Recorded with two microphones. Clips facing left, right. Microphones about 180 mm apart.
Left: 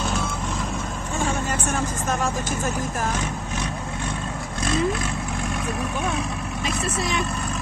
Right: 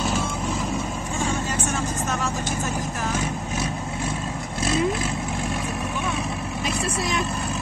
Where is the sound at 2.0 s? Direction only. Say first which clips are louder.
Left 2 dB; 50° left (ahead or behind).